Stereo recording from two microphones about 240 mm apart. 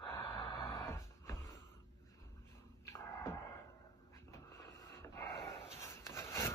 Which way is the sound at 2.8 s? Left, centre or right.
Centre.